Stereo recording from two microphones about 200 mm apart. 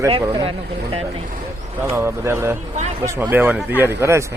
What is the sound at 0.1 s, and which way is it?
Speech, 30° right (ahead or behind).